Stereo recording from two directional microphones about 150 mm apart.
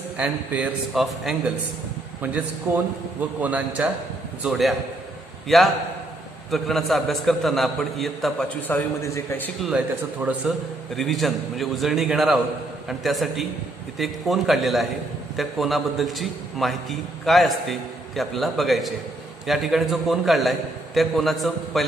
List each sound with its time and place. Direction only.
0.2 s a man's voice: 5° right (ahead or behind)
8.6 s a man's voice: 15° left (ahead or behind)
10.4 s a man's voice: 5° right (ahead or behind)